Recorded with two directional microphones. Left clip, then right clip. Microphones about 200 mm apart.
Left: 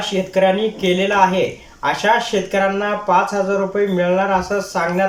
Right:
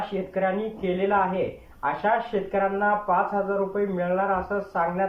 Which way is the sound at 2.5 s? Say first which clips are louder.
Left 4 dB; 10° left (ahead or behind).